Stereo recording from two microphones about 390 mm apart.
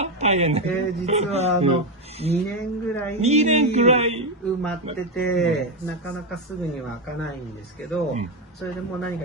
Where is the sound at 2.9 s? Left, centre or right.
Centre.